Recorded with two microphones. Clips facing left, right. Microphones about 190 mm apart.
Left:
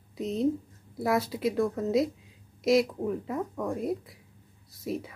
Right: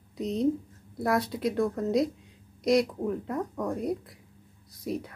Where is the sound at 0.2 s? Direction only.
Centre (ahead or behind).